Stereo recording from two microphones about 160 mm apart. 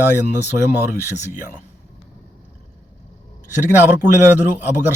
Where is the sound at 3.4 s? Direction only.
15° right (ahead or behind).